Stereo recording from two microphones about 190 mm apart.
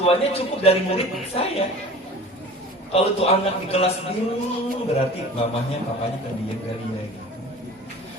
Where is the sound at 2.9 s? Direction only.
30° left (ahead or behind).